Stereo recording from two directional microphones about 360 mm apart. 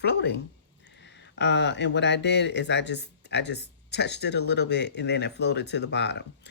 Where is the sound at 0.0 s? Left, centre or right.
Left.